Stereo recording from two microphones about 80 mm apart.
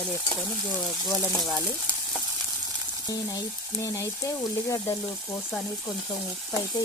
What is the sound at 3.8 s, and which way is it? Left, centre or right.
Speech, left.